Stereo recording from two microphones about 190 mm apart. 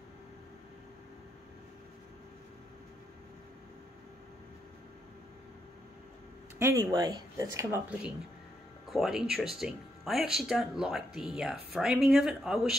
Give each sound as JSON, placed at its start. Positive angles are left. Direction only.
{"t": 6.6, "sound": "speech", "side_deg": -15}
{"t": 8.8, "sound": "speech", "side_deg": 0}